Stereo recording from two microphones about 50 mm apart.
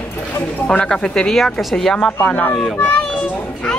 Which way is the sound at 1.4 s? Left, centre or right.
Centre.